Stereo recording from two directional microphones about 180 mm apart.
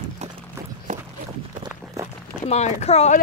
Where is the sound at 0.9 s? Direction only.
40° right (ahead or behind).